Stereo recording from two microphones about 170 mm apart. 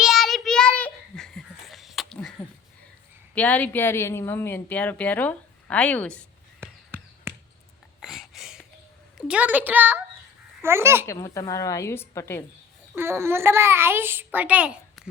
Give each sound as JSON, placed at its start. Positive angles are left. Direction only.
{"t": 0.0, "sound": "child singing", "side_deg": 0}
{"t": 3.3, "sound": "a woman's voice", "side_deg": 10}
{"t": 6.6, "sound": "a sound", "side_deg": -15}
{"t": 9.1, "sound": "a child's voice", "side_deg": -5}
{"t": 11.0, "sound": "a woman's voice", "side_deg": 15}
{"t": 13.0, "sound": "a child's voice", "side_deg": -15}